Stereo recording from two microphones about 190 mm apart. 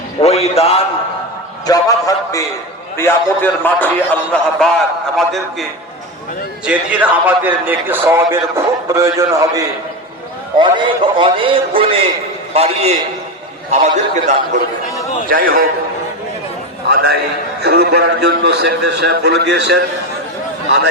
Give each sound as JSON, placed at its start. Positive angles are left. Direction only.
{"t": 0.2, "sound": "a man's voice", "side_deg": 35}
{"t": 1.6, "sound": "a man's voice", "side_deg": 20}
{"t": 6.7, "sound": "a man's voice", "side_deg": -10}
{"t": 11.2, "sound": "a man's voice", "side_deg": -25}
{"t": 15.3, "sound": "a man's voice", "side_deg": -50}
{"t": 16.9, "sound": "a man's voice", "side_deg": -55}